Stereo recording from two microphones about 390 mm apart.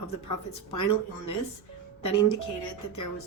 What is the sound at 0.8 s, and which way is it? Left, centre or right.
A woman's voice, left.